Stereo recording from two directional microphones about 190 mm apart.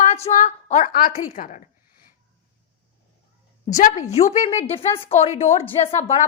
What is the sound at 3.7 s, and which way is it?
A woman's voice, 40° left (ahead or behind).